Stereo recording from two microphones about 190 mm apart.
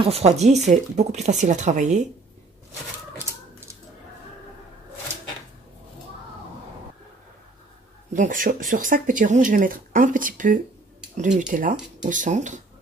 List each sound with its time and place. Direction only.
0.0 s speech: 30° right (ahead or behind)
8.1 s speech: 40° right (ahead or behind)